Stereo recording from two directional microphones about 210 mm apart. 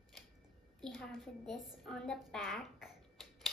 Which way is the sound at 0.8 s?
Centre (ahead or behind).